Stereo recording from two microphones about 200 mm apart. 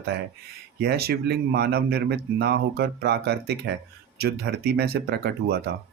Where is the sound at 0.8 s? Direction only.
55° right (ahead or behind).